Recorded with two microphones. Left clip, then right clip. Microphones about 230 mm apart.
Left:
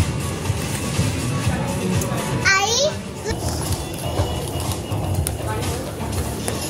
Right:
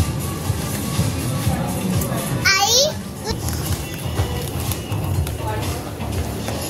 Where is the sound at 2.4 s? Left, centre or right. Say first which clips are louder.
Right 2 dB; right.